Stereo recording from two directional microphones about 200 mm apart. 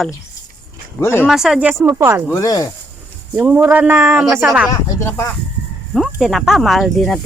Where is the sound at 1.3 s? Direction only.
Centre (ahead or behind).